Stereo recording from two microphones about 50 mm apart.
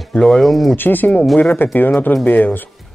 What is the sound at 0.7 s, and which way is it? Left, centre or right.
A man's voice, left.